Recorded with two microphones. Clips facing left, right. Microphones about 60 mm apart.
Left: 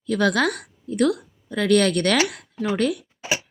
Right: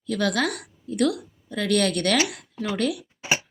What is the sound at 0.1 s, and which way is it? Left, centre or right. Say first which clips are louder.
A woman's voice: left 4 dB; left.